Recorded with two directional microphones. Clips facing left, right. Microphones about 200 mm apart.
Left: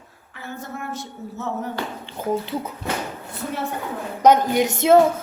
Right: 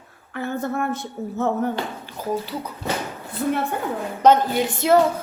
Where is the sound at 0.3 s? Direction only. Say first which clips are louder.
Right 9 dB; 60° right (ahead or behind).